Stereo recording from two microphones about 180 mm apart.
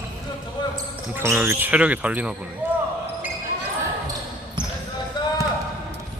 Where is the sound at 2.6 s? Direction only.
10° right (ahead or behind).